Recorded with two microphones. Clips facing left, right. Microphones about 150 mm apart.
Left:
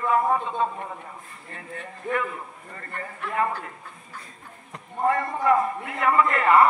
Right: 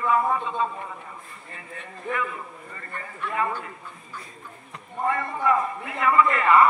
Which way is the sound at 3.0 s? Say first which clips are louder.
Left 1 dB; 55° left (ahead or behind).